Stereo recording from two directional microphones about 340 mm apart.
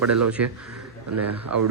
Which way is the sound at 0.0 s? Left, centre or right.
Right.